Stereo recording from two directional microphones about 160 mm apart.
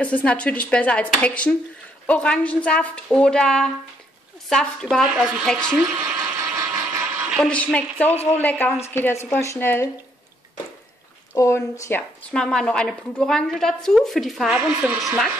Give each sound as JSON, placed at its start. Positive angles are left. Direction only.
{"t": 0.0, "sound": "a woman's voice", "side_deg": 10}
{"t": 7.2, "sound": "a sound", "side_deg": -5}
{"t": 7.4, "sound": "speech", "side_deg": 10}
{"t": 8.1, "sound": "speech", "side_deg": 40}
{"t": 8.4, "sound": "speech", "side_deg": 10}
{"t": 11.3, "sound": "speech", "side_deg": 20}
{"t": 12.3, "sound": "a woman's voice", "side_deg": 5}